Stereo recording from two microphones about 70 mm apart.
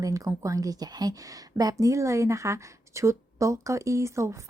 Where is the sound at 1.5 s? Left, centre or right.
Right.